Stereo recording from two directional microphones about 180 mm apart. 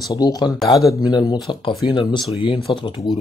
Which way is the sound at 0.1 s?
20° left (ahead or behind).